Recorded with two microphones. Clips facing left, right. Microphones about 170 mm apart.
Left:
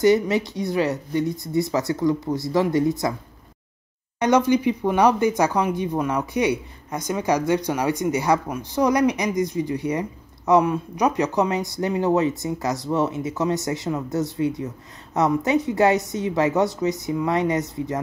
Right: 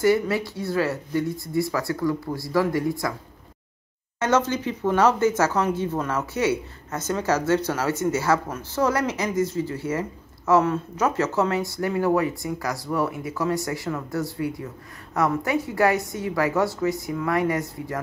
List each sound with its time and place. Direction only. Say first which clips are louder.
0.0 s speech: left 3 dB; 20° left (ahead or behind)
4.2 s speech: left 4 dB; 15° left (ahead or behind)